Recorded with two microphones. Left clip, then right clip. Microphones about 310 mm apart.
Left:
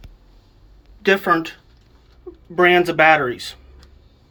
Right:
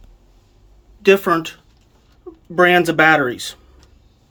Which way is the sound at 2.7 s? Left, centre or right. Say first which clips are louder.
Even; centre.